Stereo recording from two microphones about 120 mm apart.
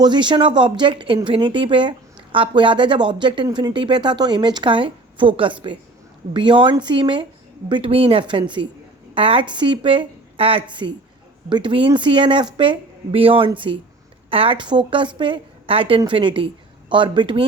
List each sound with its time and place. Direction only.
0.0 s speech: 40° right (ahead or behind)